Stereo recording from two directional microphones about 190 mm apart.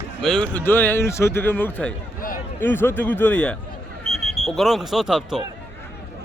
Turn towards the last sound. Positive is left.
turn(degrees=0)  # may be behind; listen again after turning